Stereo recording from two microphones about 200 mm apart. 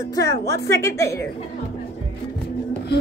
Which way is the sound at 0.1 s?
15° left (ahead or behind).